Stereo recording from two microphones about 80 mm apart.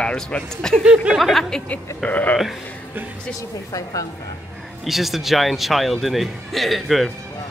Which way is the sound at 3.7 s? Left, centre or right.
Left.